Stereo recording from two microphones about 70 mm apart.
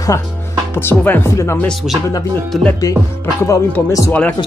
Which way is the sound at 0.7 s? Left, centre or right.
Left.